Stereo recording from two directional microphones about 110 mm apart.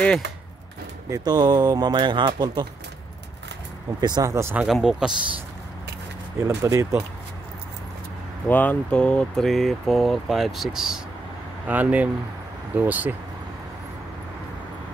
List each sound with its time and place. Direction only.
1.1 s speech: 40° right (ahead or behind)
4.0 s speech: 40° right (ahead or behind)
4.3 s speech: 25° right (ahead or behind)
4.6 s speech: 5° right (ahead or behind)
6.4 s speech: 25° right (ahead or behind)
8.5 s speech: 15° left (ahead or behind); by 11.0 s 5° right (ahead or behind)
11.6 s speech: 15° right (ahead or behind)